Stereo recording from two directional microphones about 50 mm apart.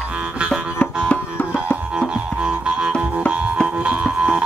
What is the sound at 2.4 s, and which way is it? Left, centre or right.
Music, centre.